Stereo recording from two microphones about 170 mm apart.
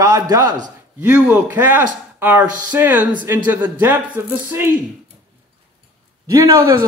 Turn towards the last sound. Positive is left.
turn(degrees=-20)  # may be behind; listen again after turning